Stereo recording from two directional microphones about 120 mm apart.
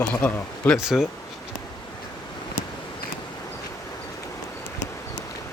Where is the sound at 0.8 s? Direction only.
5° right (ahead or behind).